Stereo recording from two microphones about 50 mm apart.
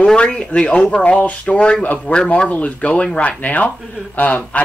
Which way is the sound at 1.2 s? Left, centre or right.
Left.